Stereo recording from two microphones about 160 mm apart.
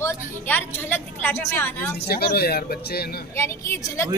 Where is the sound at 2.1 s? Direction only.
75° left (ahead or behind).